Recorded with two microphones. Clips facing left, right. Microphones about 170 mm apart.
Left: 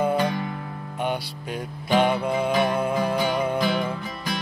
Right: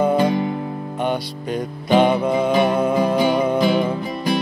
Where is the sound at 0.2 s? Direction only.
25° right (ahead or behind).